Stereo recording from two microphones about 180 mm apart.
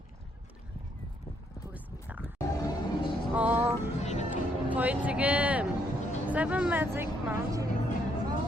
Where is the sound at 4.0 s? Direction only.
40° left (ahead or behind).